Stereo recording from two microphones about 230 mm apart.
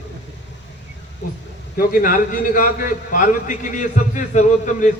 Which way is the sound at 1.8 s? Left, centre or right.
Left.